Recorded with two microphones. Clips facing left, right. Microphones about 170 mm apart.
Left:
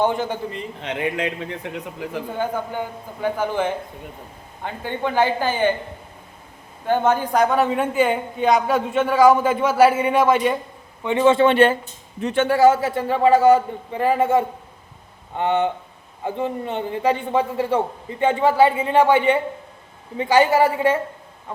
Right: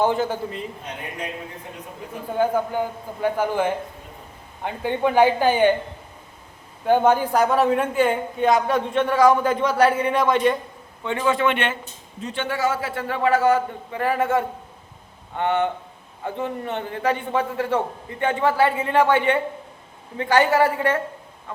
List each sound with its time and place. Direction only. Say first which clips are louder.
0.0 s a man's voice: even; 5° right (ahead or behind)
0.8 s a man's voice: left 8 dB; 90° left
2.4 s a man's voice: right 5 dB; 10° right (ahead or behind)
6.8 s a man's voice: right 2 dB; 10° right (ahead or behind); by 10.5 s 5° left (ahead or behind)
11.0 s speech: left 6 dB; 20° left (ahead or behind)
12.2 s a man's voice: left 8 dB; 55° left (ahead or behind)
12.5 s a man's voice: left 9 dB; 35° left (ahead or behind)
12.9 s a woman's voice: left 5 dB; 25° left (ahead or behind)
18.2 s a woman's voice: left 4 dB; 20° left (ahead or behind)